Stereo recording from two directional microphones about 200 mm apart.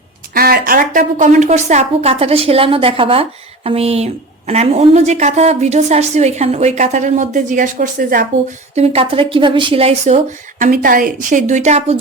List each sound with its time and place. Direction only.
0.3 s a woman's voice: 50° right (ahead or behind)
8.7 s a woman's voice: 30° right (ahead or behind)
10.6 s a woman's voice: 45° right (ahead or behind)